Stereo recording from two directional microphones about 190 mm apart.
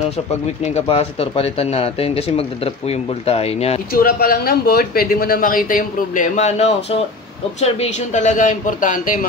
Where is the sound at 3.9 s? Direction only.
50° left (ahead or behind).